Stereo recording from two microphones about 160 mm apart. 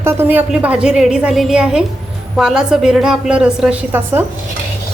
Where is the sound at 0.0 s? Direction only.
15° right (ahead or behind).